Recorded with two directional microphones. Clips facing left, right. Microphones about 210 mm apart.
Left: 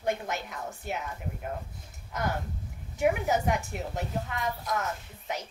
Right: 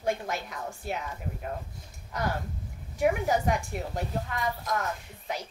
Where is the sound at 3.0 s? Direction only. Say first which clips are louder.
Right 1 dB; centre (ahead or behind).